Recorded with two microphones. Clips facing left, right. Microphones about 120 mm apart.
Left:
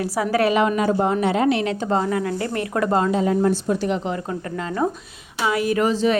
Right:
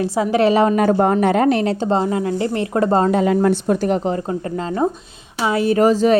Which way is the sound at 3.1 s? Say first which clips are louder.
Right 3 dB; 70° right (ahead or behind).